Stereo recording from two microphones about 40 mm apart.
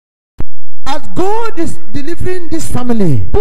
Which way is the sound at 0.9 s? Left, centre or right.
Centre.